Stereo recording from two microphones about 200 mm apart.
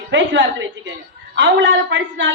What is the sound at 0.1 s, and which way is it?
Speech, 65° right (ahead or behind).